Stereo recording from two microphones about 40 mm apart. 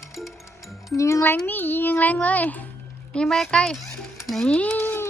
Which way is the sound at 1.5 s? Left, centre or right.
Left.